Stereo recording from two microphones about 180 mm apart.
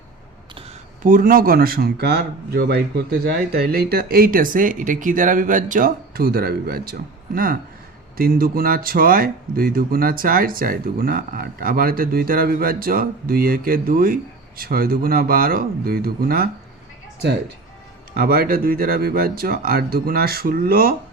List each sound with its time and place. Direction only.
1.0 s speech: 50° right (ahead or behind)
18.2 s speech: 55° right (ahead or behind)